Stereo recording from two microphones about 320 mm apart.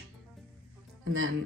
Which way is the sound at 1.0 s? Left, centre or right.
Right.